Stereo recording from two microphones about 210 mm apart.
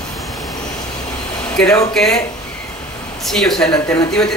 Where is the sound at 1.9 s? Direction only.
Centre (ahead or behind).